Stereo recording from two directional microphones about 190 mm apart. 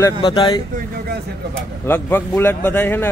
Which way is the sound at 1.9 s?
10° left (ahead or behind).